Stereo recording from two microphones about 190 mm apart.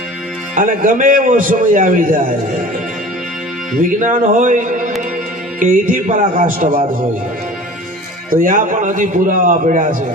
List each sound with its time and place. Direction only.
0.5 s a man's voice: 45° right (ahead or behind)
3.8 s a man's voice: 45° right (ahead or behind)
8.3 s a man's voice: 45° right (ahead or behind)